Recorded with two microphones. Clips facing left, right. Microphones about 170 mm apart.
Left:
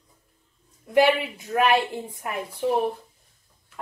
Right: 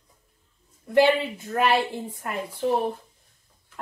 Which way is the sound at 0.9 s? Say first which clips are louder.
Even; 15° left (ahead or behind).